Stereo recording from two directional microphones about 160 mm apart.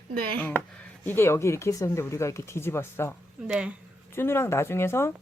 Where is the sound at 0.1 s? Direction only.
70° right (ahead or behind).